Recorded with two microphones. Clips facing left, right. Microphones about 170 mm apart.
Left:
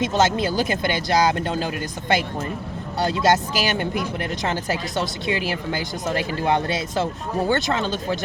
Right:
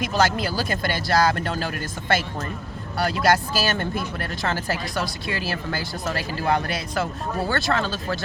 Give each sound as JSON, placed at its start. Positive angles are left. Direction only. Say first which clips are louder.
{"t": 0.0, "sound": "speech", "louder": "left 2 dB", "side_deg": 20}